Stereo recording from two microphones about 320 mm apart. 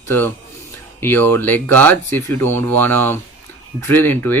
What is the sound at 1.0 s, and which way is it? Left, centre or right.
Speech, centre.